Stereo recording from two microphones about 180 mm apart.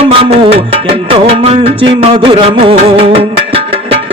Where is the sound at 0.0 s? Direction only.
30° right (ahead or behind).